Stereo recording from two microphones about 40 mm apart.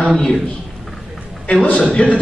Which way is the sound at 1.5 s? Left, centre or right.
Left.